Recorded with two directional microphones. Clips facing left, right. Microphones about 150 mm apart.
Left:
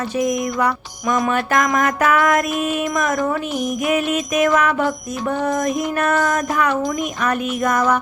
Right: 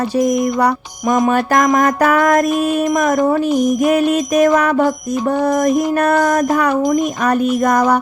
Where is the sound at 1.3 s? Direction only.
40° right (ahead or behind).